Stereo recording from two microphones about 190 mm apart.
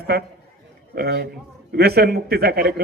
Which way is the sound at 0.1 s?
55° right (ahead or behind).